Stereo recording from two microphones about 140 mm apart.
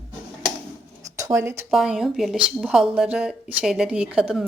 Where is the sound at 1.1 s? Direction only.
20° right (ahead or behind).